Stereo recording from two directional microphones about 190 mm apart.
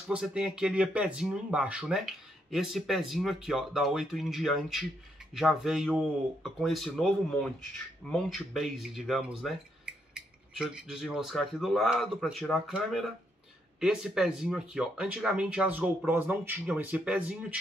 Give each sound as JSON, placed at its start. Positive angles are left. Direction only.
{"t": 0.1, "sound": "speech", "side_deg": -5}